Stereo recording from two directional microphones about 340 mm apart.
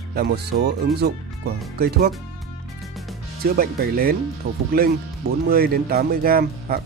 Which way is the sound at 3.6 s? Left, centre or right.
Right.